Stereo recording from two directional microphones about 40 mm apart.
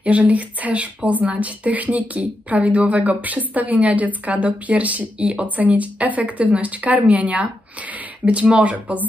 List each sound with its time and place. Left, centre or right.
0.0 s speech: right